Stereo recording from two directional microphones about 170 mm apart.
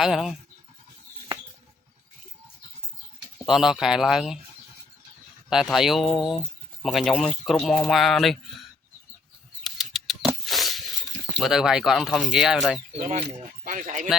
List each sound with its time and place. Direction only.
0.0 s speech: 5° right (ahead or behind)
3.4 s speech: centre (ahead or behind)
5.5 s speech: centre (ahead or behind)
9.6 s a sound: centre (ahead or behind)
11.3 s speech: centre (ahead or behind)
13.0 s speech: 40° right (ahead or behind)